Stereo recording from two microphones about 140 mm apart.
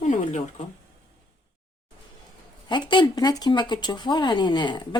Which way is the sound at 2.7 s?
35° left (ahead or behind).